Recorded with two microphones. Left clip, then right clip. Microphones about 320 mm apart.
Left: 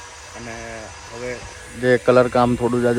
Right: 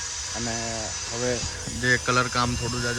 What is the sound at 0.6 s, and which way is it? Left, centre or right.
Speech, centre.